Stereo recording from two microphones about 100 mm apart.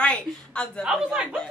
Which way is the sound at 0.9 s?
5° right (ahead or behind).